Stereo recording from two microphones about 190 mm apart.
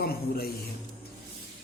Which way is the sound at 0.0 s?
55° left (ahead or behind).